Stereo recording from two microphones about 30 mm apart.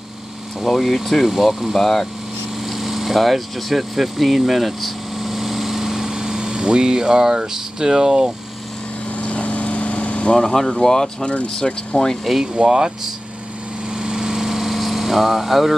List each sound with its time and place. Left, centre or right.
0.6 s speech: centre
1.8 s speech: centre
2.6 s speech: centre; by 8.3 s right
9.2 s vehicle: left
10.5 s speech: centre
11.4 s speech: left
12.6 s speech: right
13.8 s vehicle: right
14.3 s vehicle: centre